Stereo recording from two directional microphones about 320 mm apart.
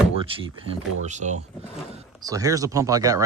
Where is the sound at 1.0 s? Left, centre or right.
Right.